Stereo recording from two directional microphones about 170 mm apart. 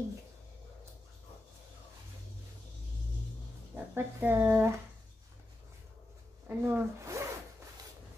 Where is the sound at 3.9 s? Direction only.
10° right (ahead or behind).